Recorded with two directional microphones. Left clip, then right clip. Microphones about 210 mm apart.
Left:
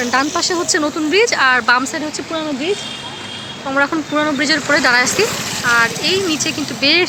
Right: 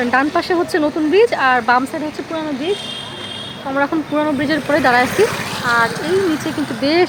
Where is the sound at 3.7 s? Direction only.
Centre (ahead or behind).